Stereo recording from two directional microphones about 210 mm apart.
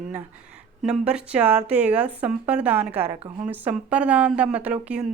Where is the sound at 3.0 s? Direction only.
20° right (ahead or behind).